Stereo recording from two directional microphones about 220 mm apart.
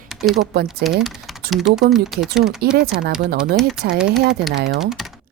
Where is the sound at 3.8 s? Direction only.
45° right (ahead or behind).